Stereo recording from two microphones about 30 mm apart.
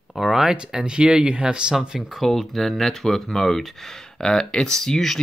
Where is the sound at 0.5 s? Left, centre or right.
Right.